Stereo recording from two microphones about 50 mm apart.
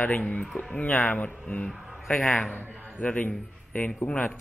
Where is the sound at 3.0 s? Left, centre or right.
Left.